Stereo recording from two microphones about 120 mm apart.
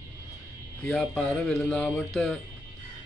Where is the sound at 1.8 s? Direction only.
20° left (ahead or behind).